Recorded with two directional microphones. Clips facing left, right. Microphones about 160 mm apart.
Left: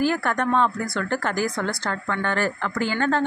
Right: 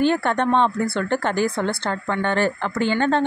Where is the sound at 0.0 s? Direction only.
25° right (ahead or behind).